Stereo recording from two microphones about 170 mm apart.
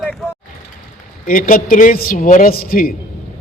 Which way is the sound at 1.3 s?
55° left (ahead or behind).